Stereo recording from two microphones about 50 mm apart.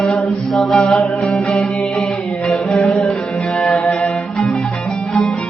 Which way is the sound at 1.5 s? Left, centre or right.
Centre.